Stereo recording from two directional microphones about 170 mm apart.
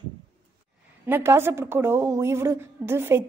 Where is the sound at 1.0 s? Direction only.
15° right (ahead or behind).